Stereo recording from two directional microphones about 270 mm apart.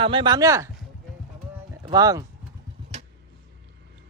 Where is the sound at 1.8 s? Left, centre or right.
Centre.